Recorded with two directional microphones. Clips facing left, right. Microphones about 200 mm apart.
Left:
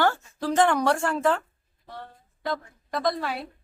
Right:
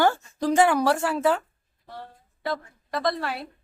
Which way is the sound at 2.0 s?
5° right (ahead or behind).